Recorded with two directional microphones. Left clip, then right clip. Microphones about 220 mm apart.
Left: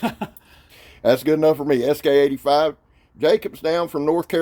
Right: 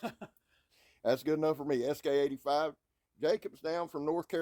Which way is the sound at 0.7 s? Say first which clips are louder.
Left 14 dB; 30° right (ahead or behind).